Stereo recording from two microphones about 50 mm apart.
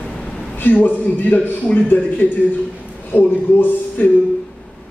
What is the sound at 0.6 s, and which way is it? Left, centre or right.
A man's voice, left.